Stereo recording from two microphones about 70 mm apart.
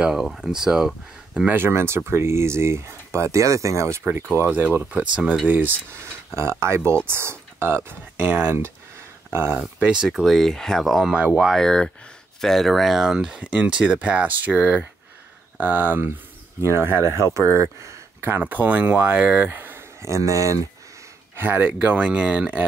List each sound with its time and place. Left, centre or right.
0.0 s speech: centre
1.6 s speech: right
4.1 s speech: right
5.9 s speech: right
9.8 s speech: centre
11.6 s speech: centre; by 18.3 s right
18.4 s speech: right
19.4 s speech: right
20.0 s speech: right
21.4 s speech: right